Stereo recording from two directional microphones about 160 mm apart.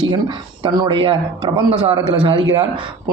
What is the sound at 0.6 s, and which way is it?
Speech, 35° right (ahead or behind).